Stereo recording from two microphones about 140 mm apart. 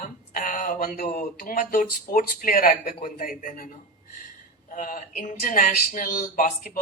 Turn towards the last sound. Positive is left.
turn(degrees=75)  # may be behind; listen again after turning